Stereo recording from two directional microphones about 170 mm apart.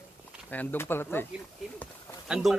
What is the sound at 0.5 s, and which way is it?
Speech, 10° left (ahead or behind).